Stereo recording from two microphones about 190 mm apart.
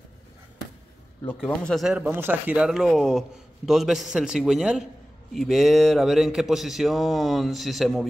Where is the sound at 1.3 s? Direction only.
5° left (ahead or behind).